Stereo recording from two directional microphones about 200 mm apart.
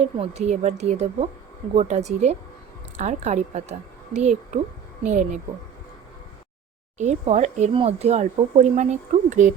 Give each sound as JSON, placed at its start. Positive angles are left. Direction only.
{"t": 0.0, "sound": "speech", "side_deg": -35}
{"t": 7.0, "sound": "speech", "side_deg": -35}